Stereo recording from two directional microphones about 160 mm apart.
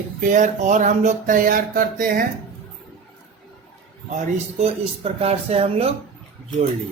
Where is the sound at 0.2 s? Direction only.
50° right (ahead or behind).